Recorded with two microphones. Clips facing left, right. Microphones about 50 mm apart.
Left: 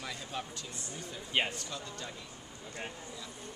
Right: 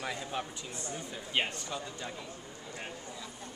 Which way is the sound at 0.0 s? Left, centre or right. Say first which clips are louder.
Right 4 dB; centre.